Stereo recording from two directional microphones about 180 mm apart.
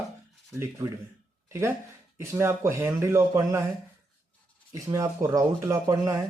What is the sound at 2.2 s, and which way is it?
Speech, 15° right (ahead or behind).